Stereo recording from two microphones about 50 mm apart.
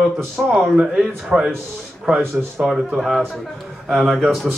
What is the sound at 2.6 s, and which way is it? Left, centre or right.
Speech, centre.